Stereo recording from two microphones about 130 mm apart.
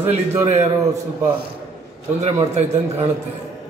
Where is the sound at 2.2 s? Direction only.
55° right (ahead or behind).